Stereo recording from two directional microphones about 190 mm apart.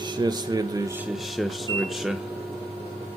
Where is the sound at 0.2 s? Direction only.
20° right (ahead or behind).